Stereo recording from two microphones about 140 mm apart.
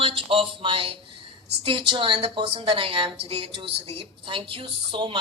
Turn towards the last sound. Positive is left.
turn(degrees=-40)  # may be behind; listen again after turning